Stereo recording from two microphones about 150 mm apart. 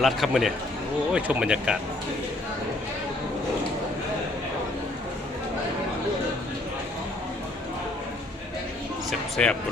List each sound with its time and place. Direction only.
0.0 s a man's voice: centre (ahead or behind)
9.0 s speech: 5° left (ahead or behind)